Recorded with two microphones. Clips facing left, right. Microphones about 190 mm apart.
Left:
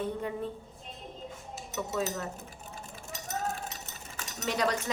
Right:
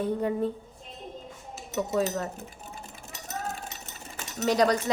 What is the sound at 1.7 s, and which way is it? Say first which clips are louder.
Speech: right 6 dB; 40° right (ahead or behind).